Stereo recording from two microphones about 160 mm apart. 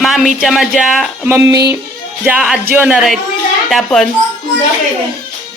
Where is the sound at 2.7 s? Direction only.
10° right (ahead or behind).